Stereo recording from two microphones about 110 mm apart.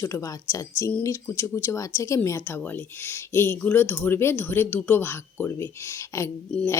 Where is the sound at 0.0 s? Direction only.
30° left (ahead or behind).